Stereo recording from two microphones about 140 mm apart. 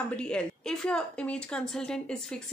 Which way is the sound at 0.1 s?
5° left (ahead or behind).